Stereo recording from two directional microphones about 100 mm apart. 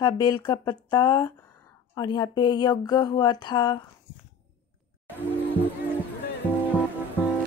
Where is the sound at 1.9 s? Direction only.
45° left (ahead or behind).